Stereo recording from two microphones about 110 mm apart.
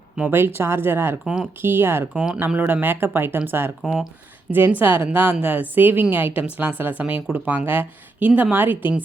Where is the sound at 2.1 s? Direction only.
10° right (ahead or behind).